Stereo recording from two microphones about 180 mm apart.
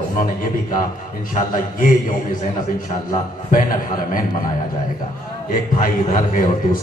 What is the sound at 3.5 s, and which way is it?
Speech, 50° left (ahead or behind).